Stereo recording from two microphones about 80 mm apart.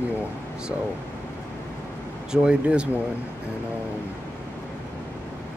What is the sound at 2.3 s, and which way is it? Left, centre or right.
Speech, centre.